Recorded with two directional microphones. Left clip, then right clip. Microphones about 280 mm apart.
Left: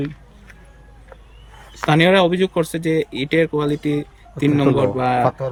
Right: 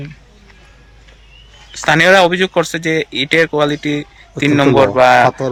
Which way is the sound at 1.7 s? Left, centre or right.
Centre.